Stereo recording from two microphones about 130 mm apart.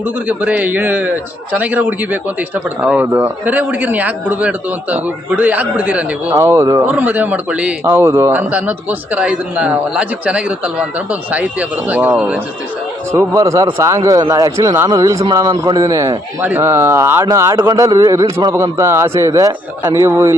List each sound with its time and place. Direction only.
0.0 s a man's voice: 10° right (ahead or behind)
6.8 s a man's voice: 15° right (ahead or behind)
13.1 s a man's voice: 20° right (ahead or behind)